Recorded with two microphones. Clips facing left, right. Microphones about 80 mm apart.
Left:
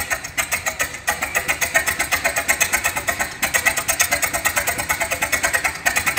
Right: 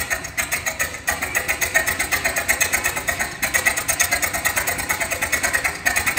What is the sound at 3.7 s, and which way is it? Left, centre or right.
Vehicle, right.